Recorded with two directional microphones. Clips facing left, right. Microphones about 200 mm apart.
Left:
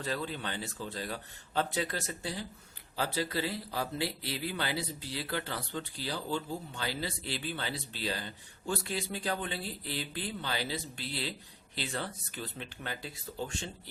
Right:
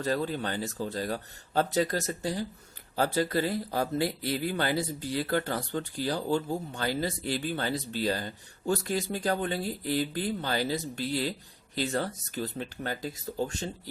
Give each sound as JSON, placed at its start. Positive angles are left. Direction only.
{"t": 0.0, "sound": "speech", "side_deg": -45}